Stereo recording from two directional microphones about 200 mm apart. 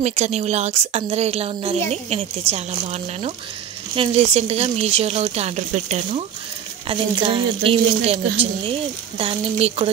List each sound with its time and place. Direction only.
0.0 s a woman's voice: 35° right (ahead or behind)
9.2 s speech: 30° right (ahead or behind)